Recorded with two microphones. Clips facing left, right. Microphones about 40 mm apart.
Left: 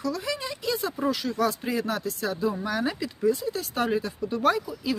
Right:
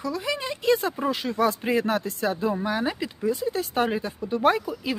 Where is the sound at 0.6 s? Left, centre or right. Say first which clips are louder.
Right 4 dB; right.